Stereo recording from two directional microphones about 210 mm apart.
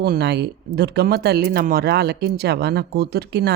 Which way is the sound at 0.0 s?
50° right (ahead or behind).